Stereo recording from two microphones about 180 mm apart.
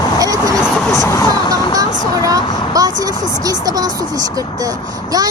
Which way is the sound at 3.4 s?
20° right (ahead or behind).